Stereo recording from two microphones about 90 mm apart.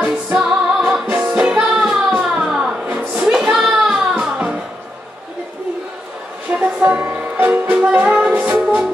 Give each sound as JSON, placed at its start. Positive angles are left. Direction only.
{"t": 0.0, "sound": "music", "side_deg": -15}
{"t": 3.2, "sound": "child singing", "side_deg": -10}
{"t": 4.1, "sound": "music", "side_deg": -15}
{"t": 6.5, "sound": "music", "side_deg": -15}